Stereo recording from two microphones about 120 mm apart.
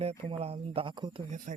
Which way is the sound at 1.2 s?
90° right.